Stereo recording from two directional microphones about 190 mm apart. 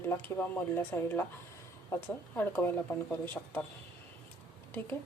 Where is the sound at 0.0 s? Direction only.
10° left (ahead or behind).